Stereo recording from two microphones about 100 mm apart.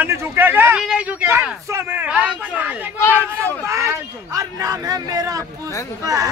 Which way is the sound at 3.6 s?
30° right (ahead or behind).